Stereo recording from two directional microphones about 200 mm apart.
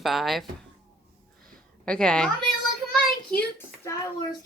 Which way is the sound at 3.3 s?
10° left (ahead or behind).